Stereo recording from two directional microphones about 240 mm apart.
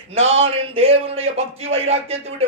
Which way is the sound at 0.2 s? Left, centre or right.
Right.